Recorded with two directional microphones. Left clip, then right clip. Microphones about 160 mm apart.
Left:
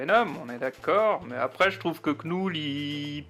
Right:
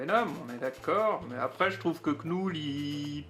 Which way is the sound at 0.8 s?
20° left (ahead or behind).